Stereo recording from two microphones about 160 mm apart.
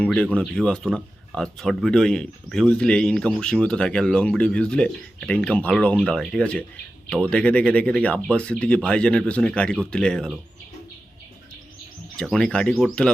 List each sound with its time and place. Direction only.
0.0 s speech: 5° left (ahead or behind)
12.1 s speech: 5° left (ahead or behind)